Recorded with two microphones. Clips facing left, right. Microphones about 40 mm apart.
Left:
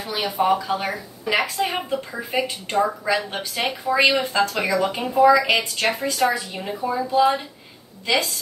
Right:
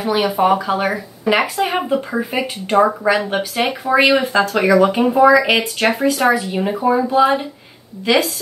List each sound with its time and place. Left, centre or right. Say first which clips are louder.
0.0 s speech: right 6 dB; right
2.8 s speech: right 7 dB; right
3.1 s speech: right 7 dB; right